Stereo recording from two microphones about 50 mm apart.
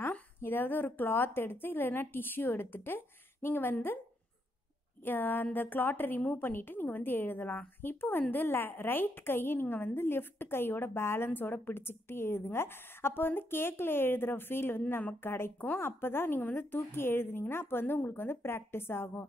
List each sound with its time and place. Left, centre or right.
0.4 s a woman's voice: left
5.0 s a woman's voice: left